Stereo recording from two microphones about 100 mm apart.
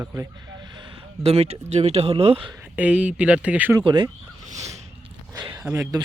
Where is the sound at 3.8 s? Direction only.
50° right (ahead or behind).